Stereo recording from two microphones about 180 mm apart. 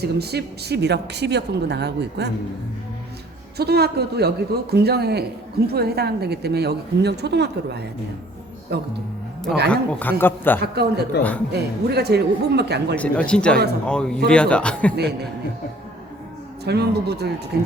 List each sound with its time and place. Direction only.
0.0 s speech: 65° right (ahead or behind)
3.6 s a woman's voice: 65° right (ahead or behind)
9.6 s speech: 5° left (ahead or behind)
10.6 s a woman's voice: 65° right (ahead or behind)
13.0 s a man's voice: 5° left (ahead or behind)
14.9 s a woman's voice: 65° right (ahead or behind)
16.6 s a woman's voice: 65° right (ahead or behind)